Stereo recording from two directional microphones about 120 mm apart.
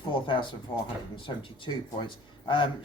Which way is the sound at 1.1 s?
45° left (ahead or behind).